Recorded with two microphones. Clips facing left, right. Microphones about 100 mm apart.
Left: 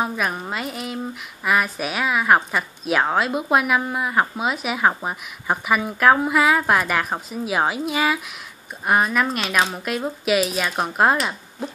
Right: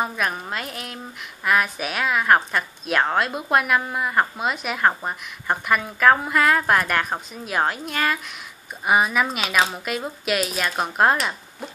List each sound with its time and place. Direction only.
0.0 s speech: centre (ahead or behind)